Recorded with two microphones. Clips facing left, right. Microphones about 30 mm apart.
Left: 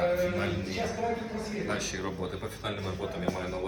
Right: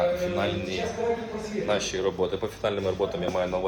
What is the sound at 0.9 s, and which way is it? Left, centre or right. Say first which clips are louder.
Speech: right 4 dB; right.